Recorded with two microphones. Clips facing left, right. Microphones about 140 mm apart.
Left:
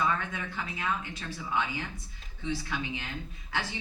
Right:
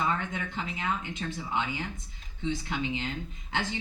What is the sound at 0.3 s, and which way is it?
Speech, 20° right (ahead or behind).